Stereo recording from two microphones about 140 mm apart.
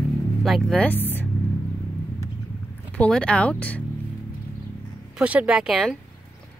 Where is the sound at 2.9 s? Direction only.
10° left (ahead or behind).